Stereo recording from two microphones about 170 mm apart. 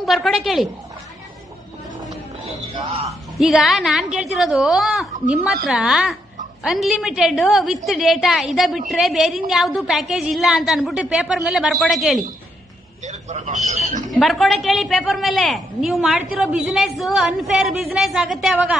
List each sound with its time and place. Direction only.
0.0 s a woman's voice: centre (ahead or behind)
3.3 s a woman's voice: centre (ahead or behind)
13.0 s a sound: 45° right (ahead or behind)
14.1 s a woman's voice: centre (ahead or behind)